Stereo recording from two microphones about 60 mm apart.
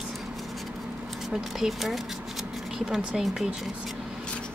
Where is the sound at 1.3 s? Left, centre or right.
Centre.